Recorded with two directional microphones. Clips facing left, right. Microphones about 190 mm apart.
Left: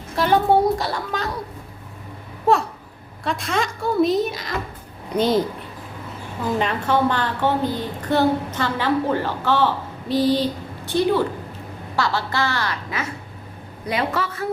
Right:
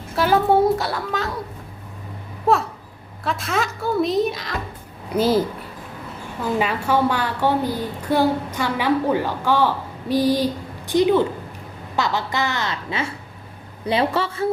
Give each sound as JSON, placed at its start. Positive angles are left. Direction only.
{"t": 0.2, "sound": "a woman's voice", "side_deg": 0}
{"t": 2.5, "sound": "a woman's voice", "side_deg": 0}
{"t": 6.6, "sound": "a woman's voice", "side_deg": -10}